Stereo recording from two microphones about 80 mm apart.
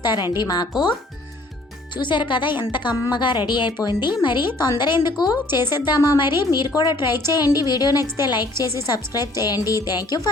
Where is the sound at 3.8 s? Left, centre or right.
Left.